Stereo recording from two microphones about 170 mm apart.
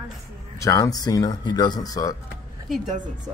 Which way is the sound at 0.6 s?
20° left (ahead or behind).